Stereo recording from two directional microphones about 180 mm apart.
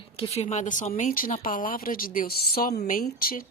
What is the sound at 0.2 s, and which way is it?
Speech, 35° left (ahead or behind).